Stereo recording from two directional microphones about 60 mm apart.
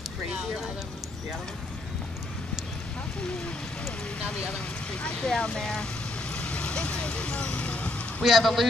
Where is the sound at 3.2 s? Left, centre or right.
Centre.